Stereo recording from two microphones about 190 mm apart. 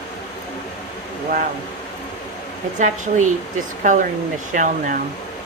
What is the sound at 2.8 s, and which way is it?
Speech, 40° right (ahead or behind).